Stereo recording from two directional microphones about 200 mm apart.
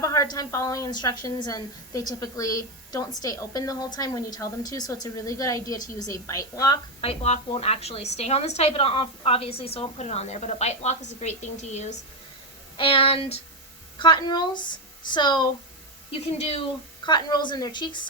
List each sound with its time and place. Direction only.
0.0 s a woman's voice: 15° left (ahead or behind)
7.0 s a woman's voice: 30° left (ahead or behind)